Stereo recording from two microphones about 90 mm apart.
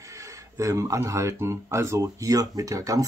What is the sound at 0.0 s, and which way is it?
Speech, 35° right (ahead or behind).